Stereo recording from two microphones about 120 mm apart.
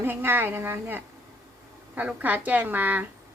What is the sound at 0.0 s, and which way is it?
Speech, 20° right (ahead or behind).